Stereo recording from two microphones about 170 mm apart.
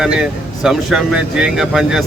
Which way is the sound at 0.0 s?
Centre (ahead or behind).